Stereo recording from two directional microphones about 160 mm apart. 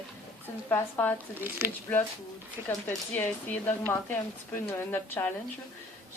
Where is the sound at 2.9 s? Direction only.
10° left (ahead or behind).